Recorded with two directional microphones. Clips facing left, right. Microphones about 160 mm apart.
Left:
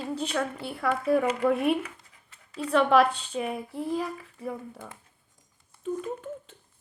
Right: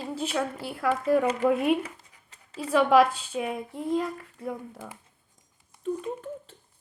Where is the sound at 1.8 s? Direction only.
35° right (ahead or behind).